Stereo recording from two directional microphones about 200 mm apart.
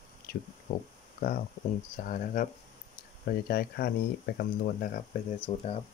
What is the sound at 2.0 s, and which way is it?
Speech, 40° left (ahead or behind).